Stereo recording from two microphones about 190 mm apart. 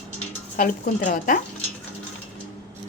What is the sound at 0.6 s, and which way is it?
Speech, 45° left (ahead or behind).